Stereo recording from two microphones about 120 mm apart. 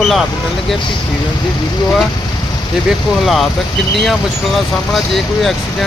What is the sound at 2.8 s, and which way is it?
Speech, centre (ahead or behind).